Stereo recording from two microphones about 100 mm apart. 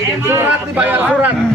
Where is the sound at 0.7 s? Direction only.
15° right (ahead or behind).